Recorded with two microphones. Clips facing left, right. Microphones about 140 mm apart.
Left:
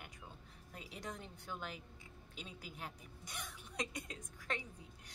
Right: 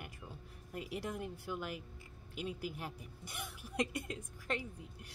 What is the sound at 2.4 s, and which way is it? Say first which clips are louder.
Speech: right 11 dB; 60° right (ahead or behind).